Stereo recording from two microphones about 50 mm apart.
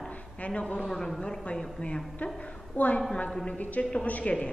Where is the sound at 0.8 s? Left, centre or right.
Centre; by 4.4 s left.